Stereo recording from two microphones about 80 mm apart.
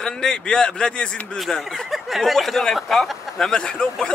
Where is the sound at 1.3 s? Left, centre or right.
Centre.